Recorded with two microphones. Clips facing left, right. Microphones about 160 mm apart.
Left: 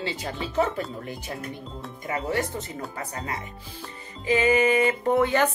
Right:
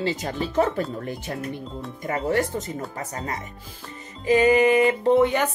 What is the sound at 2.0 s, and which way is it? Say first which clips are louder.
Speech: right 4 dB; 45° right (ahead or behind).